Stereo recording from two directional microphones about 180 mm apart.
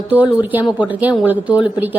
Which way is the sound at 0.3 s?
10° right (ahead or behind).